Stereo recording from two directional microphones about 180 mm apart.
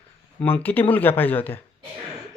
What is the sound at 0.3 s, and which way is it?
Speech, 10° left (ahead or behind).